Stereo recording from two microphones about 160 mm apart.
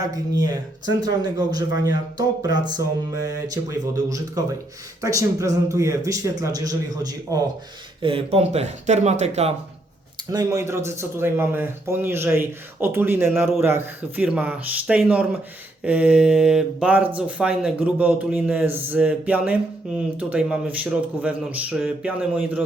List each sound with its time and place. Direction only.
0.0 s speech: 25° right (ahead or behind)
8.0 s speech: 35° right (ahead or behind)
10.3 s a man's voice: 20° right (ahead or behind)